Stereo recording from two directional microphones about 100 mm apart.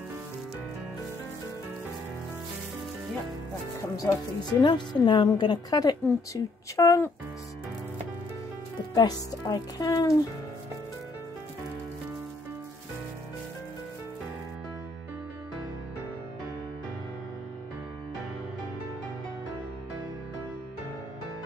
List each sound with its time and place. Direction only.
3.9 s speech: 40° left (ahead or behind)
8.9 s speech: 45° left (ahead or behind)